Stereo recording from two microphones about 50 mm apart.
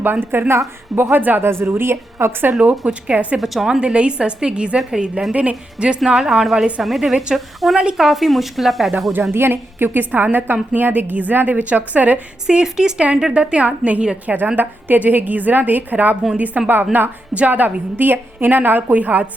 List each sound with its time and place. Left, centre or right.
0.0 s a woman's voice: right
1.5 s a woman's voice: right
2.6 s a woman's voice: right
3.3 s speech: centre
3.8 s a woman's voice: right
6.1 s speech: centre
9.3 s a woman's voice: right
12.5 s a woman's voice: centre; by 19.3 s right